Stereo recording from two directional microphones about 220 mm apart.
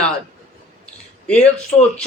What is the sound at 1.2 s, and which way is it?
Speech, 5° left (ahead or behind).